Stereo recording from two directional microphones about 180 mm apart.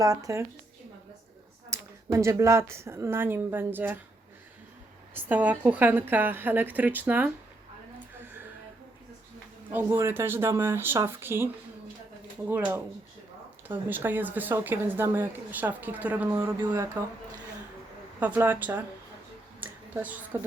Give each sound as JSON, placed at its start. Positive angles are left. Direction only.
{"t": 0.0, "sound": "speech", "side_deg": -20}
{"t": 1.7, "sound": "speech", "side_deg": -15}
{"t": 5.1, "sound": "speech", "side_deg": -10}
{"t": 9.7, "sound": "speech", "side_deg": -15}
{"t": 12.5, "sound": "speech", "side_deg": -10}
{"t": 18.2, "sound": "speech", "side_deg": -10}
{"t": 19.5, "sound": "a sound", "side_deg": -10}